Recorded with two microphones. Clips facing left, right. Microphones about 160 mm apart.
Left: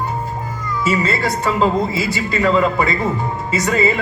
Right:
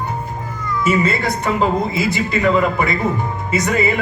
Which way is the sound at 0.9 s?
25° left (ahead or behind).